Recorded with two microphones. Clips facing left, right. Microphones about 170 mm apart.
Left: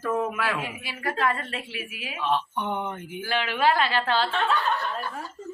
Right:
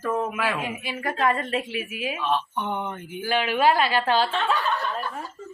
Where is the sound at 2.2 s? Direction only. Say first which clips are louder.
Left 1 dB; 15° left (ahead or behind).